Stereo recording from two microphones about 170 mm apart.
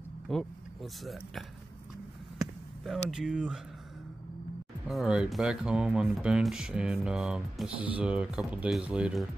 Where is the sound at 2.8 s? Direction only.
Centre (ahead or behind).